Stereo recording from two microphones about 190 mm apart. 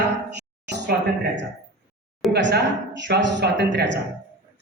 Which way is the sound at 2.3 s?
60° right (ahead or behind).